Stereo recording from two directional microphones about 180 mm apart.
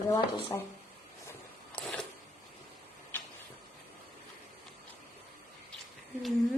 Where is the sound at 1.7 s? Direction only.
5° left (ahead or behind).